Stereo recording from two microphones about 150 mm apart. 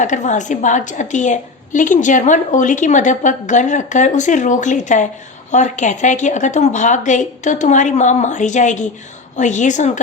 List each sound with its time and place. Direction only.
0.0 s a woman's voice: 55° left (ahead or behind)